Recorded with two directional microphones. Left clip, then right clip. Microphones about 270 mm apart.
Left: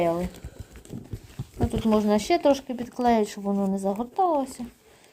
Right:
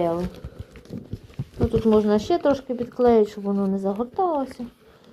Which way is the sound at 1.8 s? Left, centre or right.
Left.